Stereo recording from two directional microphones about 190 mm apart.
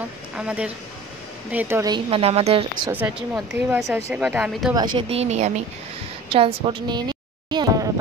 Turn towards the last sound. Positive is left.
turn(degrees=-20)  # may be behind; listen again after turning